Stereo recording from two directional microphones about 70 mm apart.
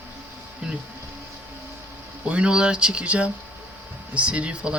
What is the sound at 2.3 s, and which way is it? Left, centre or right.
Speech, centre.